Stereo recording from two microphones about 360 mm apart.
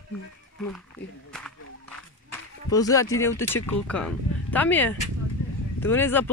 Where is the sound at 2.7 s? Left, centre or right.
Centre.